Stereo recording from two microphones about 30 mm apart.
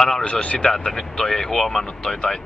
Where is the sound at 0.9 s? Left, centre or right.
Centre.